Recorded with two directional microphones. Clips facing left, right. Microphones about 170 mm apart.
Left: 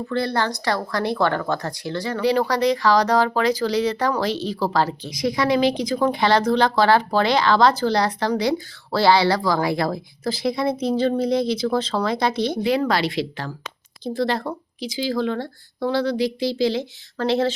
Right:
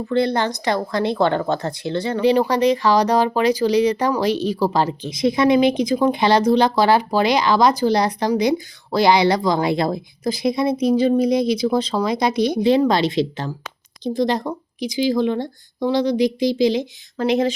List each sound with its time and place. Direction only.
0.1 s a woman's voice: 20° right (ahead or behind)